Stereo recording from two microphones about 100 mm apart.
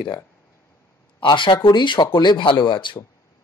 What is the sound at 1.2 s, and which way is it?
Speech, 55° left (ahead or behind).